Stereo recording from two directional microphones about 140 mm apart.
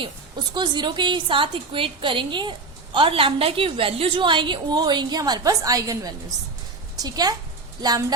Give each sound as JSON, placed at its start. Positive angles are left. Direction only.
{"t": 0.5, "sound": "a woman's voice", "side_deg": -30}